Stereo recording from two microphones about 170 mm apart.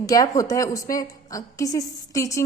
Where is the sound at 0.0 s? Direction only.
20° left (ahead or behind).